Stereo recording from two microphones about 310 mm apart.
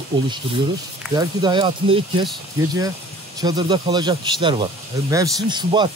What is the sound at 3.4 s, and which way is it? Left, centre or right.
Speech, centre.